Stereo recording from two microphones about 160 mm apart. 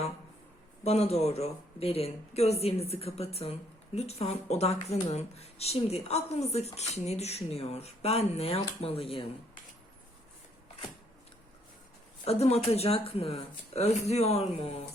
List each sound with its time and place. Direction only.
0.9 s speech: 40° left (ahead or behind)
12.2 s speech: 40° left (ahead or behind)